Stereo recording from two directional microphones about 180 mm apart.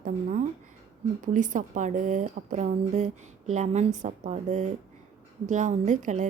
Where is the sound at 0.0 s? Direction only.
45° right (ahead or behind).